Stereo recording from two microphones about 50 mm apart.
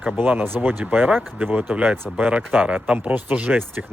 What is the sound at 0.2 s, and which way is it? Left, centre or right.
Speech, right.